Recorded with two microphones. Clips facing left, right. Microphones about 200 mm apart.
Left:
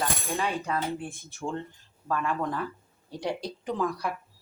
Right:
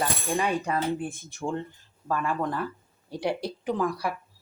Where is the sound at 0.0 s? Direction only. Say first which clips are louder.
Right 3 dB; 15° right (ahead or behind).